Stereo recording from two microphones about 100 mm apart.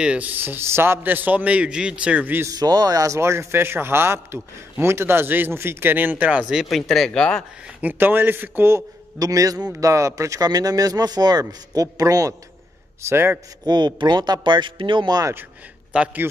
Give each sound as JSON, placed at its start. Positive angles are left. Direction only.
{"t": 0.0, "sound": "a man's voice", "side_deg": -15}
{"t": 2.4, "sound": "speech", "side_deg": -40}
{"t": 6.6, "sound": "speech", "side_deg": 0}
{"t": 7.6, "sound": "speech", "side_deg": -20}
{"t": 13.1, "sound": "speech", "side_deg": -20}
{"t": 13.7, "sound": "speech", "side_deg": -45}
{"t": 15.9, "sound": "a man's voice", "side_deg": -10}